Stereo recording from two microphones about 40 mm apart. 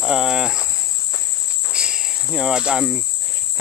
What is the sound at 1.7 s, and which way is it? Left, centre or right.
Cricket, right.